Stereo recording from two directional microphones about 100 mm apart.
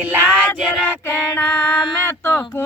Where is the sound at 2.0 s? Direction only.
20° left (ahead or behind).